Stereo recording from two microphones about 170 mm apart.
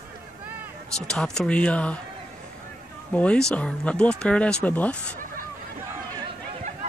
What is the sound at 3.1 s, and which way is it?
Speech, 5° left (ahead or behind).